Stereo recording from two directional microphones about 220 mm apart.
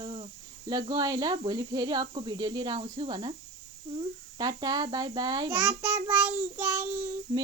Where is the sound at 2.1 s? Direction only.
20° right (ahead or behind).